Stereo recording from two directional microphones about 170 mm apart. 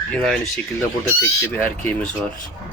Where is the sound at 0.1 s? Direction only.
5° left (ahead or behind).